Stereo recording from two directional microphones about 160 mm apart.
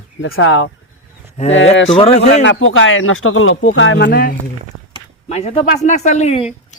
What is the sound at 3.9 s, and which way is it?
Speech, 80° left.